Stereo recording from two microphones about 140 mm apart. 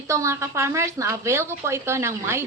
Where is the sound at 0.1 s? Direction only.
20° right (ahead or behind).